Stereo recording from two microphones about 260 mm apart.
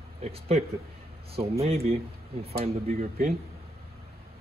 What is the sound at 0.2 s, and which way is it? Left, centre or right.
Speech, right.